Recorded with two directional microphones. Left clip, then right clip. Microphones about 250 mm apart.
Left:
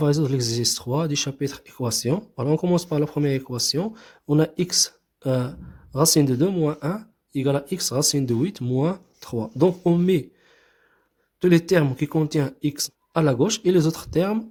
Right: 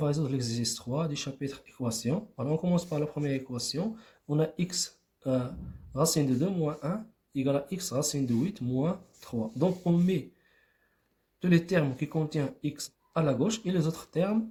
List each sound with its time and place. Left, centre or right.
0.0 s speech: left
11.3 s speech: left